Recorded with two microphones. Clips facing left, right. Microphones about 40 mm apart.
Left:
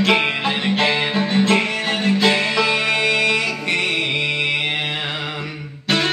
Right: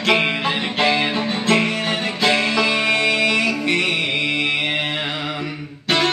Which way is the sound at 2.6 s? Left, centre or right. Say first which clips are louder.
Even; centre.